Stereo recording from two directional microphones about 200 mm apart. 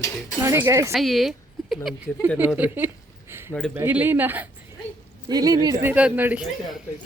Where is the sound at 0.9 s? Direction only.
Centre (ahead or behind).